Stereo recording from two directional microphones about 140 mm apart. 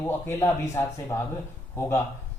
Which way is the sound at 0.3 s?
20° left (ahead or behind).